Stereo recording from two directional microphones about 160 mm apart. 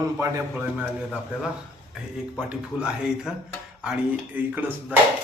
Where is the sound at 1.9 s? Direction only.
5° right (ahead or behind).